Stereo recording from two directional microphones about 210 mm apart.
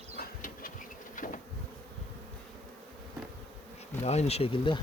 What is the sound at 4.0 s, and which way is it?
Speech, 30° left (ahead or behind).